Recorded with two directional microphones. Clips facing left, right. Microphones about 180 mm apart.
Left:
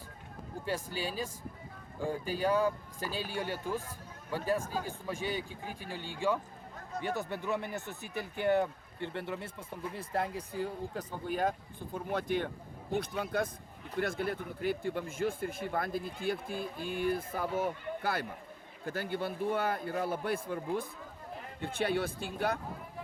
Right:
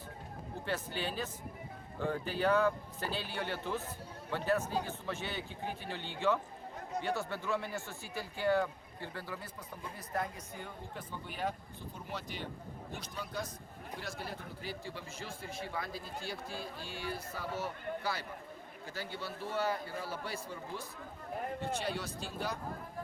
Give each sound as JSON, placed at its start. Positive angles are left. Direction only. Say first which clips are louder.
{"t": 0.7, "sound": "a man's voice", "louder": "left 2 dB", "side_deg": 10}